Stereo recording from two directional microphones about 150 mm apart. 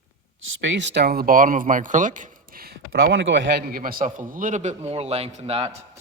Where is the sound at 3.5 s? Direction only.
75° right (ahead or behind); by 5.7 s 40° right (ahead or behind).